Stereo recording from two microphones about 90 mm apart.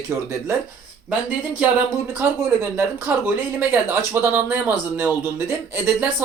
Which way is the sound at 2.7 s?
25° right (ahead or behind).